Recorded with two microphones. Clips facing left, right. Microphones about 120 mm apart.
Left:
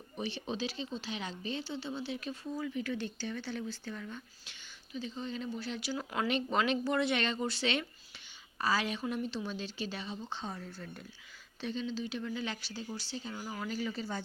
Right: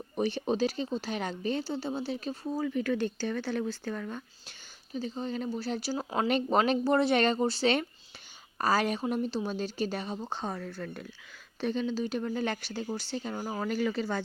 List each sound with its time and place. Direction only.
0.2 s speech: 45° right (ahead or behind)
2.6 s speech: 50° right (ahead or behind); by 6.2 s 30° right (ahead or behind)
6.2 s speech: 45° right (ahead or behind)
10.5 s speech: 65° right (ahead or behind)
11.6 s speech: 55° right (ahead or behind)
13.7 s speech: 65° right (ahead or behind)